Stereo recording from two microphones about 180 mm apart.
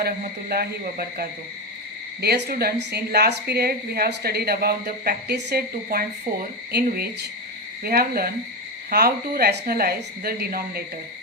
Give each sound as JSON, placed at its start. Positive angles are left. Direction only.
{"t": 0.0, "sound": "a woman's voice", "side_deg": -60}